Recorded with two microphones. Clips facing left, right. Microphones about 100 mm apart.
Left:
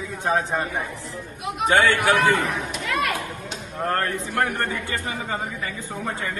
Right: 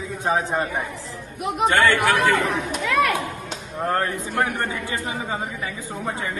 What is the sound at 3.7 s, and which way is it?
A man's voice, 15° right (ahead or behind).